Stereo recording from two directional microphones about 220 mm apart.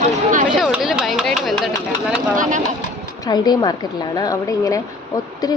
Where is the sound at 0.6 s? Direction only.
Centre (ahead or behind).